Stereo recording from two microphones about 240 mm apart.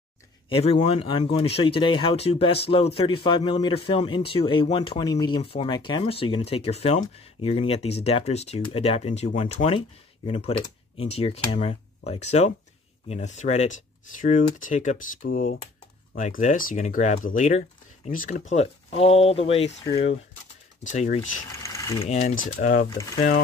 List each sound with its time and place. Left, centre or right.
0.5 s speech: left
21.6 s mechanisms: centre
22.0 s speech: left
22.9 s speech: centre